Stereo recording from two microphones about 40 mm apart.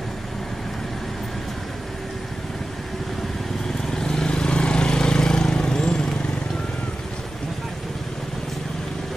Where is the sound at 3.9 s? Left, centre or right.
Centre.